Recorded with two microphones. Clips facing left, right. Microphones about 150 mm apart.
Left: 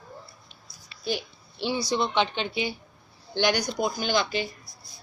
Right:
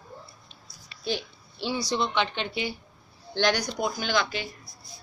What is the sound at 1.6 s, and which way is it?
A woman's voice, 20° left (ahead or behind).